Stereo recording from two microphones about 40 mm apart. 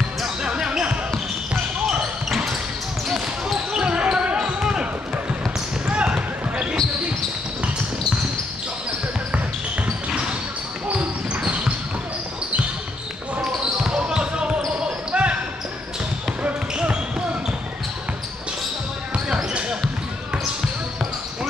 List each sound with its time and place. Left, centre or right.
0.4 s basketball bounce: centre
1.9 s basketball bounce: centre
5.9 s basketball bounce: right
10.9 s basketball bounce: right
13.8 s basketball bounce: centre
16.7 s a sound: right
19.2 s basketball bounce: right